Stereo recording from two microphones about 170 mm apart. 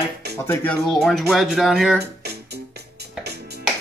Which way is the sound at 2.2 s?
75° right (ahead or behind).